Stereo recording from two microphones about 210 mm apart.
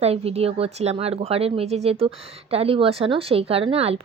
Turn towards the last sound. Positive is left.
turn(degrees=-30)  # may be behind; listen again after turning